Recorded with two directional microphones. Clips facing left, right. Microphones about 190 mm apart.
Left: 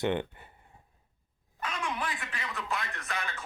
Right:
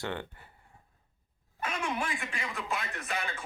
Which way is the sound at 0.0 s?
20° left (ahead or behind).